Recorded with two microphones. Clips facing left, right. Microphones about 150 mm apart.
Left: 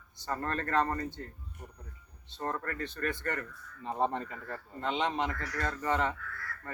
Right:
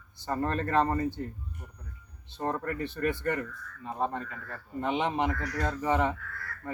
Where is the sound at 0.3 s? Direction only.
15° right (ahead or behind).